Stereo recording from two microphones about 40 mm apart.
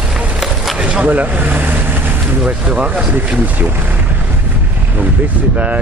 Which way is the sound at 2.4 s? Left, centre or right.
Right.